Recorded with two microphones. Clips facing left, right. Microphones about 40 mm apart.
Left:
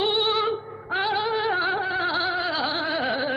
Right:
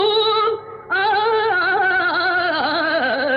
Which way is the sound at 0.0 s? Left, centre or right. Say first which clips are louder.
Right 7 dB; right.